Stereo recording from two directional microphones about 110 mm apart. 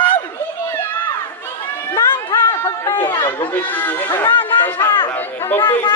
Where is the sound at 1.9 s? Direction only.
25° left (ahead or behind).